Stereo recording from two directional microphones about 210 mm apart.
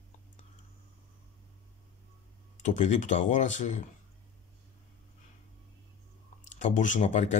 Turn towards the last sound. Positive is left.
turn(degrees=35)  # may be behind; listen again after turning